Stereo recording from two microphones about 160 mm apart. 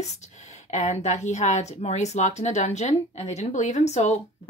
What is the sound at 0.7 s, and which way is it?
A woman's voice, 45° left (ahead or behind).